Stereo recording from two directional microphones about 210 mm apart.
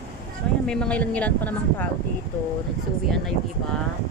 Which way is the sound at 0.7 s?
5° left (ahead or behind).